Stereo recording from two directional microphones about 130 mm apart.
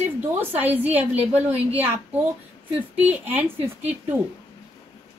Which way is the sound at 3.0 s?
15° right (ahead or behind).